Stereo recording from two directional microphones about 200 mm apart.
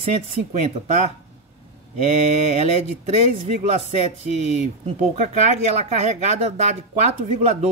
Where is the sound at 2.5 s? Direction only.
30° right (ahead or behind).